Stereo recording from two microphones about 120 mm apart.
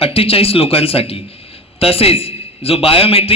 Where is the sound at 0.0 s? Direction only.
55° left (ahead or behind).